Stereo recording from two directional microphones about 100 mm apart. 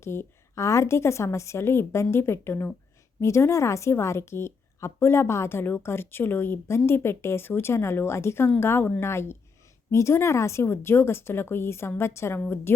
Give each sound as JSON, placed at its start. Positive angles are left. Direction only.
{"t": 0.0, "sound": "a woman's voice", "side_deg": 25}